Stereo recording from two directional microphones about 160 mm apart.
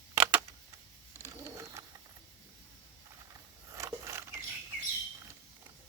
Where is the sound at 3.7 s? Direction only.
20° right (ahead or behind).